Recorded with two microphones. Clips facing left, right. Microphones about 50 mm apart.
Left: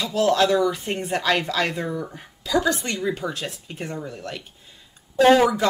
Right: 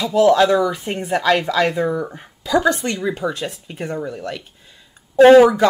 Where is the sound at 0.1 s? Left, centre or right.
Centre.